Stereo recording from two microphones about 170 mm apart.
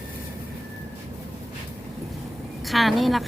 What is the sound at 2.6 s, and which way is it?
Speech, centre (ahead or behind).